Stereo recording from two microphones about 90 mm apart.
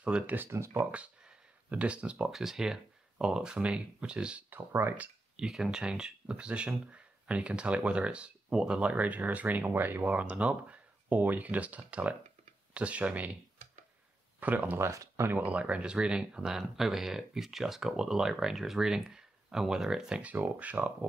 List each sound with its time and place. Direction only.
0.0 s speech: 15° right (ahead or behind)
0.5 s speech: 30° right (ahead or behind)
0.9 s speech: 15° right (ahead or behind)
14.4 s speech: 20° right (ahead or behind)
14.9 s speech: 35° right (ahead or behind)
15.3 s speech: 15° right (ahead or behind)